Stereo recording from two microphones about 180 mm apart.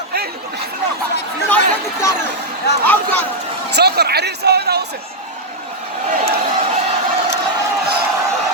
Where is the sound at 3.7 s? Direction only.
65° right (ahead or behind).